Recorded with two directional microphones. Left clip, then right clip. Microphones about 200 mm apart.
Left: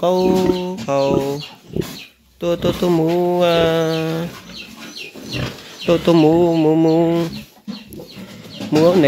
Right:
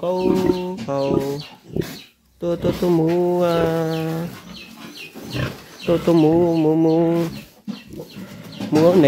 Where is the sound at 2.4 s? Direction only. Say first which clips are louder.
Left 3 dB; 10° left (ahead or behind).